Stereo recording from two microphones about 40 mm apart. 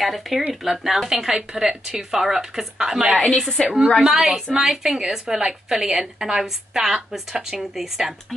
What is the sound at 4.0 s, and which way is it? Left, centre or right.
A woman's voice, centre.